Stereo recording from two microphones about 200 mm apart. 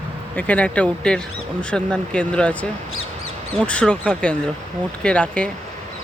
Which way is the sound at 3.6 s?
5° left (ahead or behind).